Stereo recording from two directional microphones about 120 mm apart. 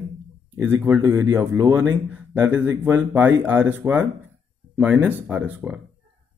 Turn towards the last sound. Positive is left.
turn(degrees=-10)  # may be behind; listen again after turning